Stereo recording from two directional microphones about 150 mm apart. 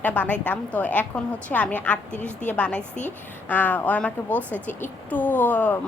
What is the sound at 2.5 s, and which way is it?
A woman's voice, 10° left (ahead or behind).